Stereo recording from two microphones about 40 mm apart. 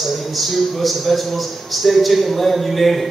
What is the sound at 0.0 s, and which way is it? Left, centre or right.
A man's voice, centre.